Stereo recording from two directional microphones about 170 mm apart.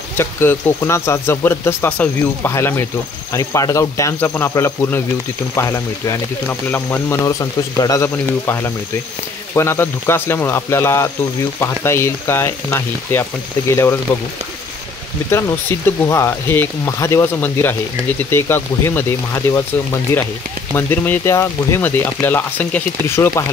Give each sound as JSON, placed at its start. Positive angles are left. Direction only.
{"t": 0.2, "sound": "speech", "side_deg": 15}
{"t": 15.7, "sound": "speech", "side_deg": 15}